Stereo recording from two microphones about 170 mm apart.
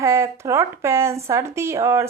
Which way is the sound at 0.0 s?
15° right (ahead or behind).